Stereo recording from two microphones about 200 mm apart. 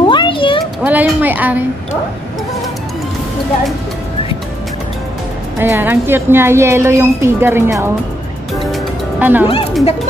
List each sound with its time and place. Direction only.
0.0 s a sound: 25° left (ahead or behind)
0.8 s a woman's voice: 10° right (ahead or behind)
5.6 s a woman's voice: 10° right (ahead or behind)
9.2 s a woman's voice: 10° right (ahead or behind)